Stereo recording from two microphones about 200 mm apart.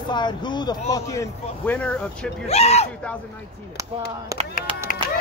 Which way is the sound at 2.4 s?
30° left (ahead or behind).